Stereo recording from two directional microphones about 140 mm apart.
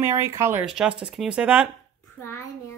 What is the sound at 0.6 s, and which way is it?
Speech, 5° right (ahead or behind).